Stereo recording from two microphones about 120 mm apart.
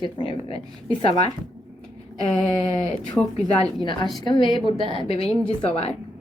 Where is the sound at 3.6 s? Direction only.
40° left (ahead or behind).